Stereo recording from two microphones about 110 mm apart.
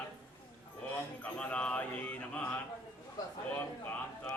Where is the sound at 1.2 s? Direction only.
10° left (ahead or behind).